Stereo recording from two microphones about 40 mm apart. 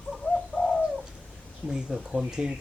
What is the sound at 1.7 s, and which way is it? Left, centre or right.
Speech, centre.